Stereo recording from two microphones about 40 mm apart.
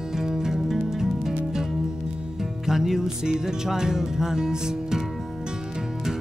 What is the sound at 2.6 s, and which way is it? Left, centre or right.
Music, centre.